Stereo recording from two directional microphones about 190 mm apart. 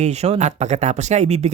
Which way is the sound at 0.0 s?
35° right (ahead or behind).